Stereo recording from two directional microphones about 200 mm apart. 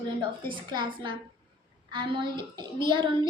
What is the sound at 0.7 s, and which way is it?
A child's voice, 25° right (ahead or behind).